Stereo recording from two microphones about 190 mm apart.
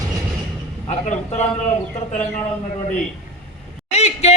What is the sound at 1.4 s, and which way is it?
Speech, 35° left (ahead or behind).